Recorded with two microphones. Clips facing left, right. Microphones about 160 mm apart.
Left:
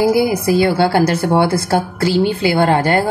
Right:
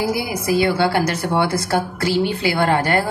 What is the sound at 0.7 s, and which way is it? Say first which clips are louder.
Speech: left 4 dB; 30° left (ahead or behind).